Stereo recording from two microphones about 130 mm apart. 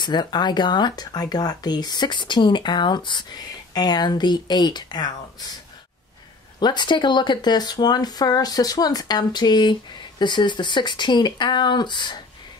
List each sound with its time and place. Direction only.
0.0 s speech: 35° left (ahead or behind)
6.6 s speech: 35° left (ahead or behind)